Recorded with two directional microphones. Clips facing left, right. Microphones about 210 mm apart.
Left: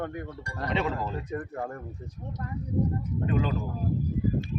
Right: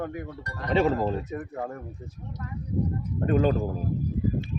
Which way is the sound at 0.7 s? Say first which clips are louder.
Right 7 dB; 40° right (ahead or behind).